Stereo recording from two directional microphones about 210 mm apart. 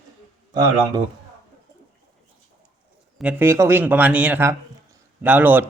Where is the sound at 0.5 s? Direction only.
20° right (ahead or behind).